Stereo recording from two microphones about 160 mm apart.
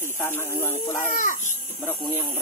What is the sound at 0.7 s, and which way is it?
Speech, 55° left (ahead or behind).